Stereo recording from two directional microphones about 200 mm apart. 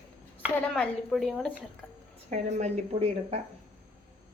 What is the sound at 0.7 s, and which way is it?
Speech, centre (ahead or behind).